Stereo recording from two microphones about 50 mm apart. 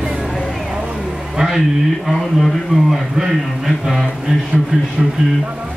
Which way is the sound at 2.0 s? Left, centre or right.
Centre.